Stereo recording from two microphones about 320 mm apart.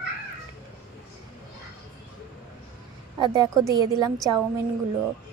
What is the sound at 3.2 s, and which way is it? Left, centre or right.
Speech, centre.